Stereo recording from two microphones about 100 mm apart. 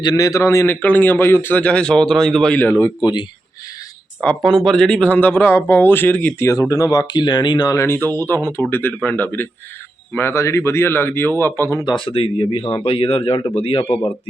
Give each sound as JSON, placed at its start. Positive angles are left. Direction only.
{"t": 0.0, "sound": "a man's voice", "side_deg": 40}
{"t": 2.6, "sound": "speech", "side_deg": 15}
{"t": 3.0, "sound": "speech", "side_deg": 45}
{"t": 4.4, "sound": "speech", "side_deg": 5}
{"t": 6.5, "sound": "speech", "side_deg": 30}
{"t": 7.8, "sound": "a man's voice", "side_deg": 25}
{"t": 11.9, "sound": "speech", "side_deg": 60}